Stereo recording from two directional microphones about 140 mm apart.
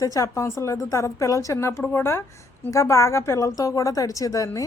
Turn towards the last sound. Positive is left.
turn(degrees=25)  # may be behind; listen again after turning